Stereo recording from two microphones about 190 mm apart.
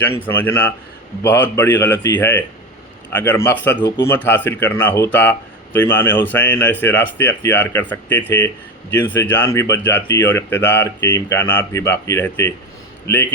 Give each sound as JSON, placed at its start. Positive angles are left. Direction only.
{"t": 0.2, "sound": "speech", "side_deg": 10}
{"t": 3.8, "sound": "speech", "side_deg": 25}
{"t": 4.0, "sound": "speech", "side_deg": 10}